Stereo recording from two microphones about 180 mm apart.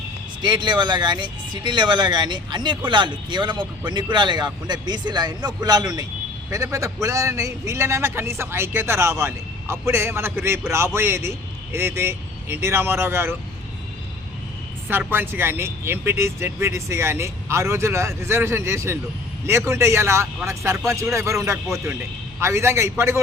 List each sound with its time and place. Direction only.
0.4 s a man's voice: 25° right (ahead or behind)
14.8 s a man's voice: 10° right (ahead or behind)